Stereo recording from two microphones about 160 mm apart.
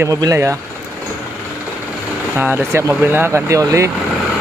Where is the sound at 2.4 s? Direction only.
10° right (ahead or behind).